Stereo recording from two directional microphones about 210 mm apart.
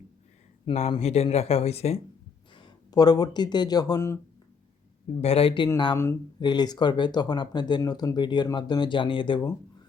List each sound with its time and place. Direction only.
0.6 s speech: 30° left (ahead or behind)
2.6 s speech: 20° left (ahead or behind)
5.1 s speech: 30° left (ahead or behind)